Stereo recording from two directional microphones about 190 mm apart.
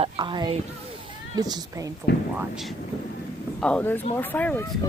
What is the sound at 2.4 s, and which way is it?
Speech, centre (ahead or behind).